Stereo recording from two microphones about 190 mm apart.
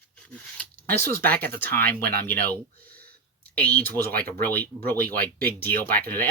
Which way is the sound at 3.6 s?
10° left (ahead or behind).